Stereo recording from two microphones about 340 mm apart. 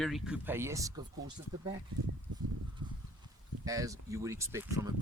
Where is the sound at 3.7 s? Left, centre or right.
Centre.